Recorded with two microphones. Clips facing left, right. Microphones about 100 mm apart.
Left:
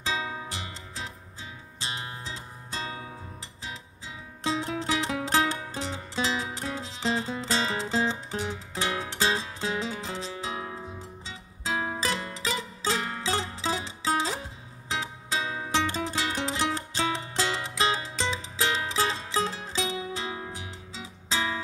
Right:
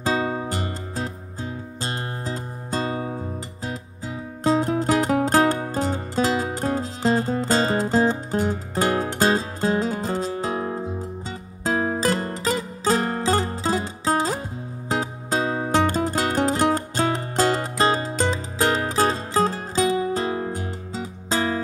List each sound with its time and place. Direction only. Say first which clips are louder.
0.0 s music: right 9 dB; 50° right (ahead or behind)